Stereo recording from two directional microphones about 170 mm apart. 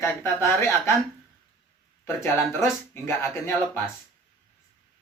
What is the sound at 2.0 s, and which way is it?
Speech, 15° left (ahead or behind).